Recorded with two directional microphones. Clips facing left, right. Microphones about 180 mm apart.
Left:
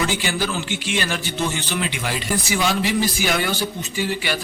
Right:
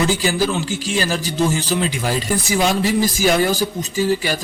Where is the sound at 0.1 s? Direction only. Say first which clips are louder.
Right 5 dB; 35° right (ahead or behind).